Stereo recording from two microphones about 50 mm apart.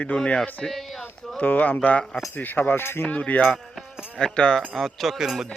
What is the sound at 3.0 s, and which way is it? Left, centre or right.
Speech, left.